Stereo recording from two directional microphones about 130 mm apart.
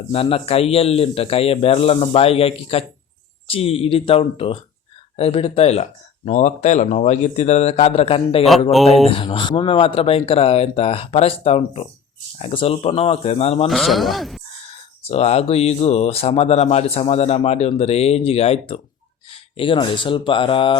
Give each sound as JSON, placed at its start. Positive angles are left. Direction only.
{"t": 0.1, "sound": "speech", "side_deg": 45}
{"t": 13.7, "sound": "speech", "side_deg": 0}
{"t": 15.0, "sound": "speech", "side_deg": 55}